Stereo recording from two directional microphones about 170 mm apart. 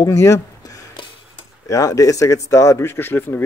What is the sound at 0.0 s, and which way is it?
Speech, 20° left (ahead or behind).